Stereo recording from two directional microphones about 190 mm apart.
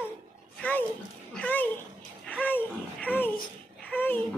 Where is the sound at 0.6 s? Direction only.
10° left (ahead or behind).